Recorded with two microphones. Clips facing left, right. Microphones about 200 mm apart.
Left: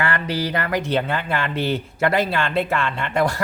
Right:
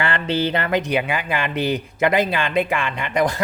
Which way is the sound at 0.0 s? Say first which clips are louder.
Right 2 dB; 25° right (ahead or behind).